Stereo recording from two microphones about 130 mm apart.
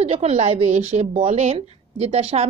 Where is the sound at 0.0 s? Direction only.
50° right (ahead or behind).